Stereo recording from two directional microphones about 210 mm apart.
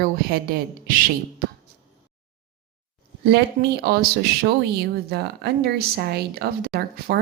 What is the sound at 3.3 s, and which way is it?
Speech, 50° right (ahead or behind).